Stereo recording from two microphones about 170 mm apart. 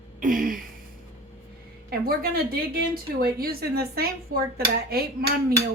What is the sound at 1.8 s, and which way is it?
A woman's voice, 60° right (ahead or behind).